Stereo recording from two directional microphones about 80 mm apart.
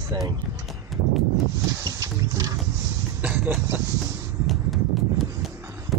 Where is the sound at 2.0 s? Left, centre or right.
Right.